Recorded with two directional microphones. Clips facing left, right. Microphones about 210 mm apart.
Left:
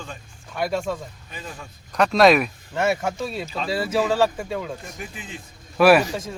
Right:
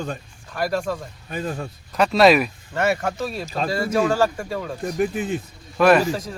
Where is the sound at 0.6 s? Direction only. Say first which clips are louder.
Right 1 dB; centre (ahead or behind).